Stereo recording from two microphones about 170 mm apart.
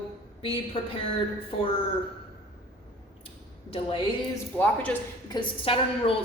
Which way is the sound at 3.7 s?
30° left (ahead or behind).